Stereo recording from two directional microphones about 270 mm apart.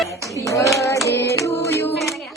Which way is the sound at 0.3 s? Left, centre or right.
Centre.